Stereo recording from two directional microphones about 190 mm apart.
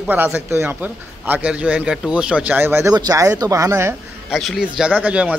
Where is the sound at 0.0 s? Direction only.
10° right (ahead or behind).